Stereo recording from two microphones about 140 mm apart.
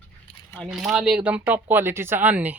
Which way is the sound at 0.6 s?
Centre (ahead or behind).